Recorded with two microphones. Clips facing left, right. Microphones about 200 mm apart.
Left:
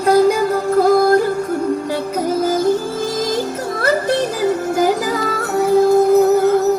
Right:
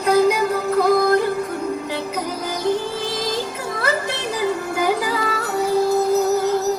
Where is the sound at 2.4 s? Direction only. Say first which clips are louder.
Left 9 dB; 45° left (ahead or behind).